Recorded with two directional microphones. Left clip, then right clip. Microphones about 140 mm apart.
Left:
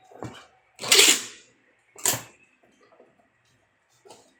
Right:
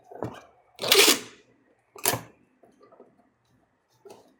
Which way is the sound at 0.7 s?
40° right (ahead or behind).